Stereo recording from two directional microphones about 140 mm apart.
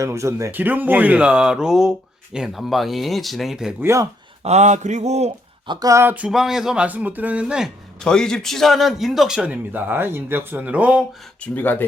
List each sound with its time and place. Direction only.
0.0 s a man's voice: 20° right (ahead or behind); by 3.8 s 5° right (ahead or behind)
3.8 s speech: 20° right (ahead or behind)
4.4 s mantra: 55° right (ahead or behind)
5.6 s speech: 30° right (ahead or behind); by 7.7 s 5° right (ahead or behind)
8.0 s a man's voice: 5° left (ahead or behind)
11.5 s speech: 15° left (ahead or behind)